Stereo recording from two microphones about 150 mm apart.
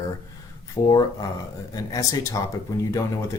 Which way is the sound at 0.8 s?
25° left (ahead or behind).